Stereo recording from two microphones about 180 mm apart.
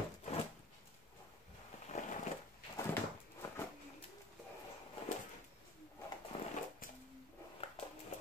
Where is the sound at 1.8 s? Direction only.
40° left (ahead or behind).